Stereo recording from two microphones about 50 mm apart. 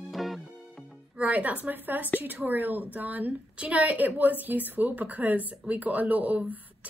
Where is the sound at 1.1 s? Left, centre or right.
Right.